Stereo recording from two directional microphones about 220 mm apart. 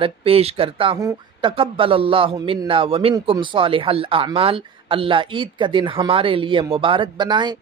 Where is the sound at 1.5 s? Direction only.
25° right (ahead or behind).